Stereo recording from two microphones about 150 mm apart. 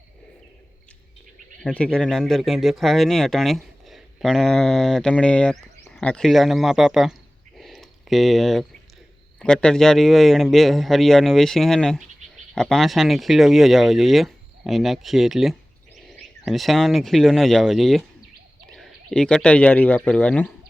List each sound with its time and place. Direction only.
1.6 s speech: 5° left (ahead or behind)
7.6 s a sound: centre (ahead or behind)
9.4 s speech: 5° left (ahead or behind)